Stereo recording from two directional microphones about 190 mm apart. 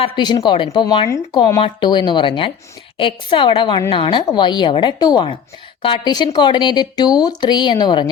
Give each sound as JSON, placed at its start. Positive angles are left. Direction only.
{"t": 0.0, "sound": "speech", "side_deg": 25}